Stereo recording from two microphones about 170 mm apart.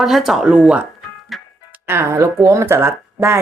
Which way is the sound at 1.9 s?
15° right (ahead or behind).